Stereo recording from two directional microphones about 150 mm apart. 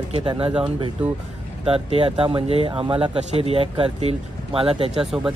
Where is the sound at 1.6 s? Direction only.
40° right (ahead or behind).